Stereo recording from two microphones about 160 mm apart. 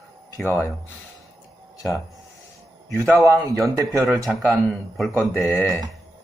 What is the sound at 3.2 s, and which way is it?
Speech, 20° right (ahead or behind).